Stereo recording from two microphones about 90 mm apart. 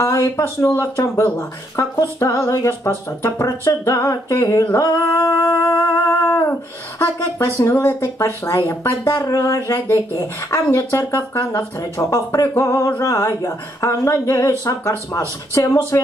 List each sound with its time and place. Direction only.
0.0 s speech: 35° left (ahead or behind)
5.8 s music: 25° left (ahead or behind)
7.0 s speech: 30° left (ahead or behind)